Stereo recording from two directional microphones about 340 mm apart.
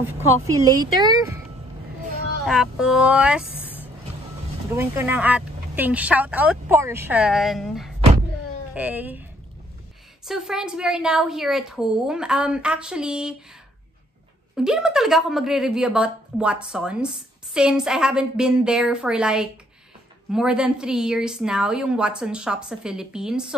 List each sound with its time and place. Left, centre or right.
0.0 s speech: centre
2.4 s a woman's voice: centre
10.2 s a woman's voice: centre
14.5 s a woman's voice: centre